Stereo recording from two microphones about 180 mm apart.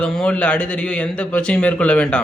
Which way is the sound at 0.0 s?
5° left (ahead or behind).